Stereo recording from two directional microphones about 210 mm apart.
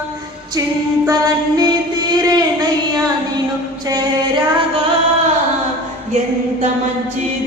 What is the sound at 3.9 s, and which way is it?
Music, 20° right (ahead or behind).